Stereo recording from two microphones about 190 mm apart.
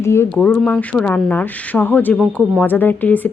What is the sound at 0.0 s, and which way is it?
Speech, 15° left (ahead or behind).